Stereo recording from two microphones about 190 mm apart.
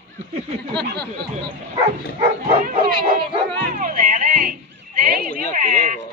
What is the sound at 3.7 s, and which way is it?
Music, 45° right (ahead or behind).